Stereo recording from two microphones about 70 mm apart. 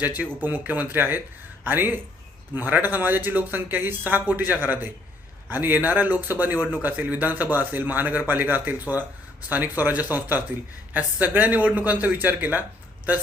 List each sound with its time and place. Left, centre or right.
0.0 s speech: right
6.6 s speech: centre
6.8 s speech: right